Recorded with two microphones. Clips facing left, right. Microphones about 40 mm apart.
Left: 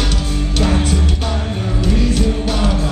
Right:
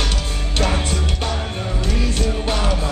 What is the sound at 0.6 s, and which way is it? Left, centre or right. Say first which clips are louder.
Music: left 3 dB; centre.